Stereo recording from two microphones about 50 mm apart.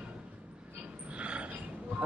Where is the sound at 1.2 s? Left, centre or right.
Right.